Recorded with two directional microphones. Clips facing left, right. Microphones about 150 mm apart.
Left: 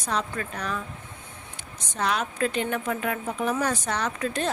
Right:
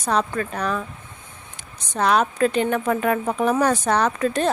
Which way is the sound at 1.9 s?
60° right (ahead or behind).